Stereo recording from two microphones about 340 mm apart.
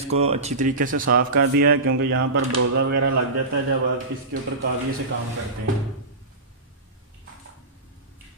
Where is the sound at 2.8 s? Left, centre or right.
Right.